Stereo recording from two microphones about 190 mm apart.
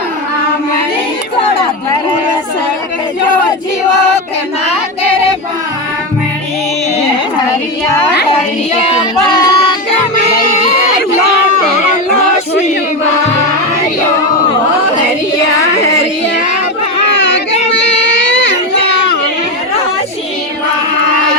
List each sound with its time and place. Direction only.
9.3 s music: 20° left (ahead or behind)
16.0 s a sound: 70° left (ahead or behind)
17.2 s child singing: 65° left (ahead or behind)